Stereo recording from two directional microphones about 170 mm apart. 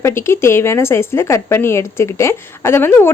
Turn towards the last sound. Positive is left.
turn(degrees=15)  # may be behind; listen again after turning